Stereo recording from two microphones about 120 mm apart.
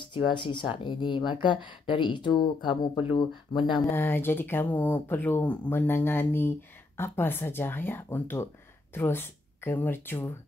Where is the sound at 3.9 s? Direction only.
20° left (ahead or behind).